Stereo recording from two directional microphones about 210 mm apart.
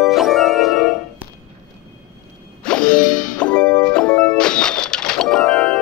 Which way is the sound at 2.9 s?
40° left (ahead or behind).